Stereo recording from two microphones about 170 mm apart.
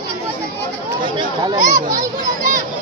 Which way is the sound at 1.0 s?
25° right (ahead or behind).